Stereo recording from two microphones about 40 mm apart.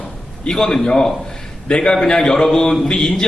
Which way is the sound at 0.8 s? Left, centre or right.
Centre.